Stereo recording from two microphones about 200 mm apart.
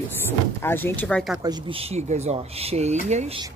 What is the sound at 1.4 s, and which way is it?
Speech, 35° right (ahead or behind).